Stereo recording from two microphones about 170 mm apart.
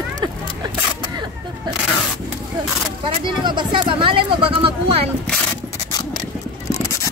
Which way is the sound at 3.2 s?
25° right (ahead or behind).